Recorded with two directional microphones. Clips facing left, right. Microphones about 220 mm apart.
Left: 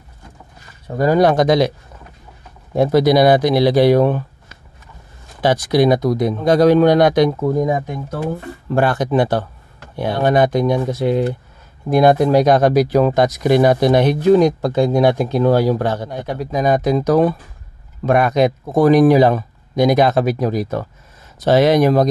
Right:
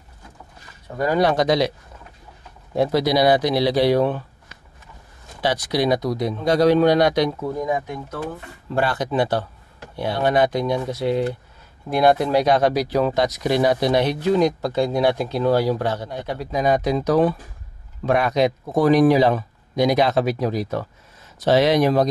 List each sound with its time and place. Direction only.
0.9 s speech: 40° left (ahead or behind)
2.7 s speech: 50° left (ahead or behind)
8.6 s speech: 50° left (ahead or behind)